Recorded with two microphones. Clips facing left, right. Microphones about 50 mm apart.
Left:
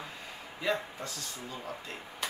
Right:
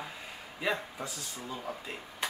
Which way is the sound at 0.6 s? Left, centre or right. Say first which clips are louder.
Left 1 dB; centre.